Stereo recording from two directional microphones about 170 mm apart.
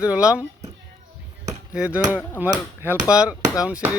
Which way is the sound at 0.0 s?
5° right (ahead or behind).